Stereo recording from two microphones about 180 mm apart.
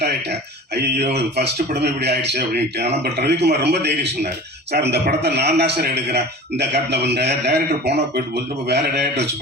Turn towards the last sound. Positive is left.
turn(degrees=-70)  # may be behind; listen again after turning